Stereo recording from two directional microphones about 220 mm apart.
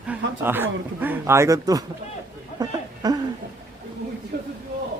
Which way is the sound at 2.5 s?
15° right (ahead or behind).